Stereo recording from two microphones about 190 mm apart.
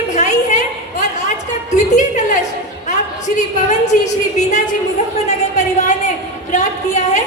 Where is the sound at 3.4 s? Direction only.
40° left (ahead or behind).